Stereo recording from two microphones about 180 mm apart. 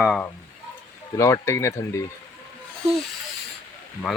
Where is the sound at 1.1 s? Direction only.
15° left (ahead or behind).